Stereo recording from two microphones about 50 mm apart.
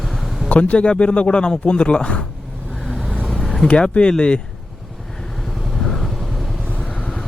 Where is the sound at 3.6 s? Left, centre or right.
Centre.